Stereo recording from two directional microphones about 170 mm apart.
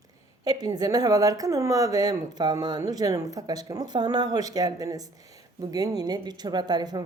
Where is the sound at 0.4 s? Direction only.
25° right (ahead or behind).